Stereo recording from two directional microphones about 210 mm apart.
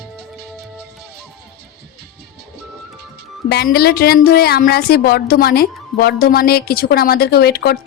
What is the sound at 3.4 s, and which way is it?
Speech, 50° left (ahead or behind).